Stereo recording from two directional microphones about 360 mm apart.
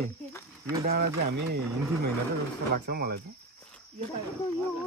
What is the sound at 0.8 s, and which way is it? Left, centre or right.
Speech, right.